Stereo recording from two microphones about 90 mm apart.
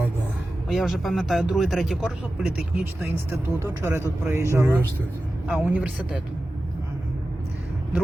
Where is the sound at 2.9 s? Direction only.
25° right (ahead or behind).